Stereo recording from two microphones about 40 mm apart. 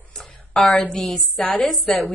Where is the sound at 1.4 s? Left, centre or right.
Left.